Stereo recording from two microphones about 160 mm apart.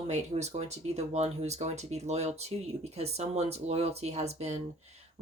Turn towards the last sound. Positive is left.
turn(degrees=-40)  # may be behind; listen again after turning